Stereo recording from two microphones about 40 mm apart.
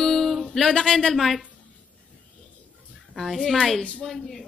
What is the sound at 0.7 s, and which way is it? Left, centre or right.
Speech, centre.